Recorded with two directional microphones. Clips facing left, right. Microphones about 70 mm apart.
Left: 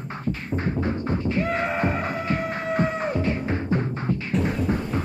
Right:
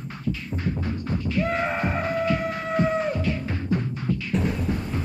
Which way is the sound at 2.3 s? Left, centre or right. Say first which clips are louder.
Right 1 dB; left.